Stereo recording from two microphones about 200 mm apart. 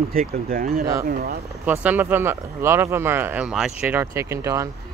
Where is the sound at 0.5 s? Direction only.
45° right (ahead or behind).